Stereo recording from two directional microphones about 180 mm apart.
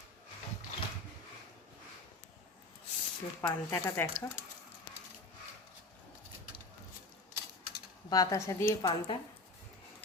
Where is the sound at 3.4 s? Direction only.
15° left (ahead or behind).